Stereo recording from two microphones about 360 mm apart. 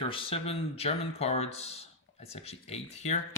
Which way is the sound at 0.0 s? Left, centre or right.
Centre.